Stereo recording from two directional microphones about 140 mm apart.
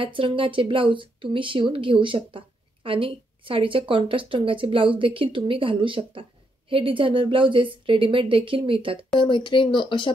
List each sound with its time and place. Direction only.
0.0 s speech: 40° right (ahead or behind)
9.2 s speech: 35° left (ahead or behind)